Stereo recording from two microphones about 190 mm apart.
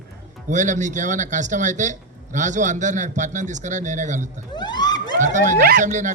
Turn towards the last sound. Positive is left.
turn(degrees=-40)  # may be behind; listen again after turning